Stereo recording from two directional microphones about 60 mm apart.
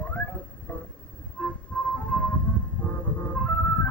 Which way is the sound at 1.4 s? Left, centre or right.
Left.